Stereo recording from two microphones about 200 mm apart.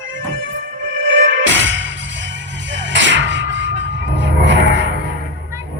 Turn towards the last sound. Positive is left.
turn(degrees=-65)  # may be behind; listen again after turning